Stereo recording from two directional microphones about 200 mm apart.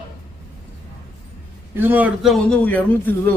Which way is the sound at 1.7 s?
10° right (ahead or behind).